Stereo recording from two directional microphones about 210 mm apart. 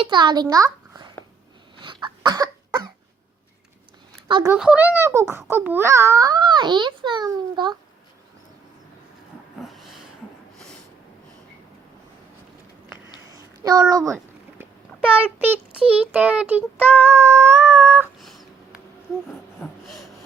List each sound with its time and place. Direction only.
0.0 s a child's voice: 20° right (ahead or behind)
1.8 s cough: 25° right (ahead or behind)
4.3 s a child's voice: 20° right (ahead or behind)
4.5 s a child's voice: 5° right (ahead or behind)
9.6 s dog: centre (ahead or behind)
13.3 s a sound: 15° right (ahead or behind)
13.9 s a child's voice: 15° right (ahead or behind)
19.6 s snort: centre (ahead or behind)